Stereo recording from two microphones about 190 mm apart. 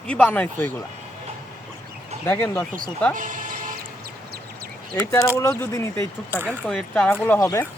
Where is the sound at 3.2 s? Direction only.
45° right (ahead or behind).